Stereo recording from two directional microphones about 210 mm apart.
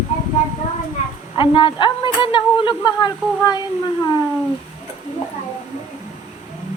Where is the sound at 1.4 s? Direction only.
20° left (ahead or behind).